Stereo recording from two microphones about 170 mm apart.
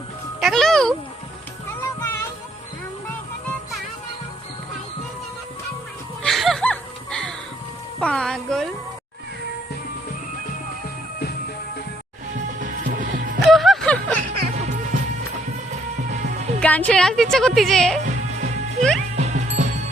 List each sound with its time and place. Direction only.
0.3 s music: centre (ahead or behind)
1.8 s music: 15° left (ahead or behind)
6.2 s music: centre (ahead or behind)
12.5 s music: 50° right (ahead or behind)
13.5 s music: centre (ahead or behind)
16.2 s music: 45° right (ahead or behind)
16.6 s a woman's voice: 10° left (ahead or behind)
18.0 s music: 45° right (ahead or behind)